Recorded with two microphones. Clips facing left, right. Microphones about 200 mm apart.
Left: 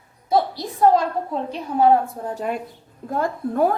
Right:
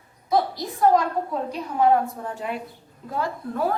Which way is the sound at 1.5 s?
30° left (ahead or behind).